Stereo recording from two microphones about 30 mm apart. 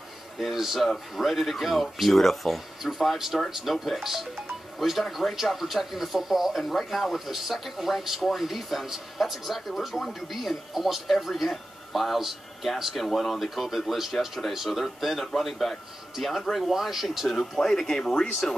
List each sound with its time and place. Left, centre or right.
0.4 s speech: centre
2.8 s speech: centre
17.4 s speech: centre